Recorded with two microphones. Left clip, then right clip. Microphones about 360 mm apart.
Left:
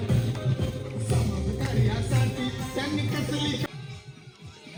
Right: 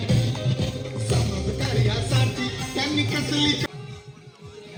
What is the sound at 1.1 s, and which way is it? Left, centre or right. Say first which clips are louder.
Music: right 4 dB; right.